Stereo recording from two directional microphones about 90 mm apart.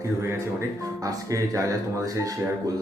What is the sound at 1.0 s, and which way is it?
Speech, 40° right (ahead or behind).